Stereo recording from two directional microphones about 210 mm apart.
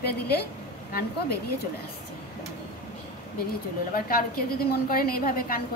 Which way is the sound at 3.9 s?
45° left (ahead or behind).